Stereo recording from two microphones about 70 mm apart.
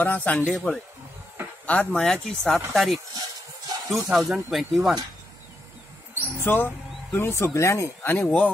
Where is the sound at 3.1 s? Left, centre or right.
Right.